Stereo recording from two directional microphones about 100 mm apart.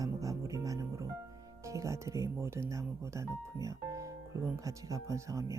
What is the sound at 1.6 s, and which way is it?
Speech, 30° right (ahead or behind).